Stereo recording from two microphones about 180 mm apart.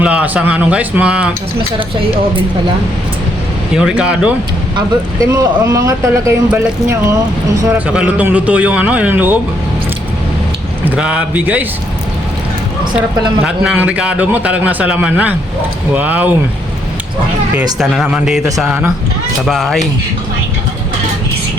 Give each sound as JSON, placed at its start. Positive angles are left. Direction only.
{"t": 0.0, "sound": "speech", "side_deg": -5}
{"t": 3.8, "sound": "speech", "side_deg": -5}
{"t": 5.3, "sound": "speech", "side_deg": -20}
{"t": 10.8, "sound": "speech", "side_deg": -5}
{"t": 13.0, "sound": "speech", "side_deg": -5}
{"t": 17.7, "sound": "speech", "side_deg": 0}